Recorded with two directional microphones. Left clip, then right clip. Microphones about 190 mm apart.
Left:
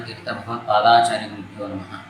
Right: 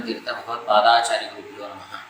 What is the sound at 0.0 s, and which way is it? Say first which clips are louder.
A man's voice: right 1 dB; 5° left (ahead or behind).